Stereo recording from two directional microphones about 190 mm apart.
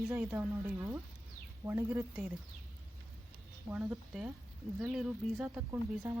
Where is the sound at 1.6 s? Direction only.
15° right (ahead or behind).